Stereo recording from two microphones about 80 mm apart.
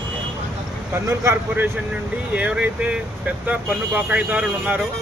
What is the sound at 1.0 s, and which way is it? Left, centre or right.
Speech, right.